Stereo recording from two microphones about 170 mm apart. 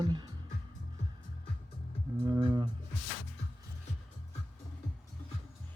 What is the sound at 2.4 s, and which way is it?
Speech, 25° right (ahead or behind).